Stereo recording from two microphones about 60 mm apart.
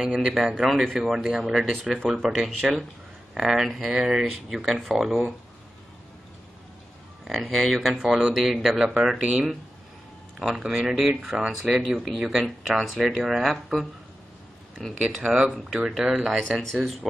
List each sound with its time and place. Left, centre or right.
0.0 s speech: centre
0.6 s speech: centre
7.2 s speech: centre
7.9 s speech: centre
15.1 s speech: centre
16.3 s speech: centre